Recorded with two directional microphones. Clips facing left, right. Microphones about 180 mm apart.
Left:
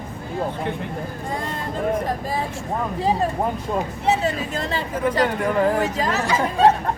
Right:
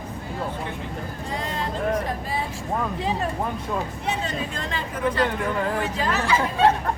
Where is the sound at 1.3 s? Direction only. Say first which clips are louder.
Left 1 dB; 50° left (ahead or behind).